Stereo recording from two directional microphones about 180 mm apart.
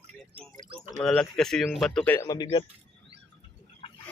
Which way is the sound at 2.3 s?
25° left (ahead or behind).